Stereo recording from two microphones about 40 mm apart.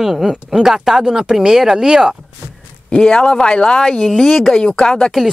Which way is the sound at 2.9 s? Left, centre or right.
Left.